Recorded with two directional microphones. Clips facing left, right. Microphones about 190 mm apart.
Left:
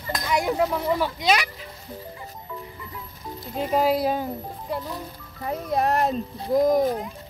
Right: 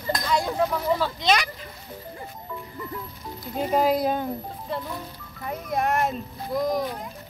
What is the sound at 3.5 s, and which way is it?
Speech, 5° left (ahead or behind).